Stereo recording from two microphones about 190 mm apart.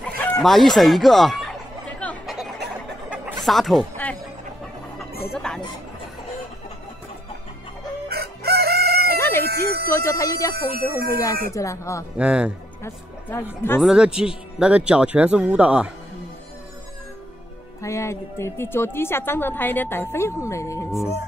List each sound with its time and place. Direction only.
0.0 s chicken: 5° left (ahead or behind)
3.1 s a sound: 5° right (ahead or behind)
5.3 s speech: 5° left (ahead or behind)
8.1 s chicken: 55° right (ahead or behind)
9.2 s chicken: 10° left (ahead or behind)
9.5 s music: 55° right (ahead or behind)
9.8 s a woman's voice: 15° left (ahead or behind)
10.5 s music: 55° right (ahead or behind)
11.5 s a woman's voice: 15° left (ahead or behind)
12.2 s speech: 5° right (ahead or behind)
13.7 s speech: 5° right (ahead or behind)
17.8 s a woman's voice: 15° left (ahead or behind)